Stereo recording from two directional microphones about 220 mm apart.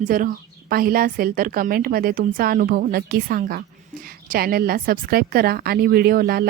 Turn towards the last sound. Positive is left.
turn(degrees=-45)  # may be behind; listen again after turning